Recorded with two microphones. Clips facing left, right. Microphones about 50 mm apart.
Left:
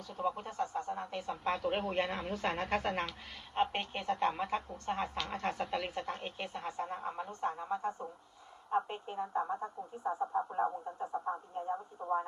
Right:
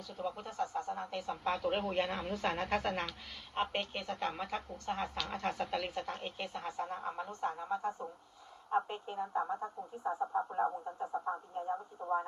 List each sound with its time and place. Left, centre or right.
0.1 s a man's voice: left
3.8 s a man's voice: left
7.0 s a sound: centre
7.3 s a man's voice: left
8.9 s speech: centre
10.0 s speech: right
10.3 s speech: centre
11.3 s radio: centre
12.0 s a man's voice: left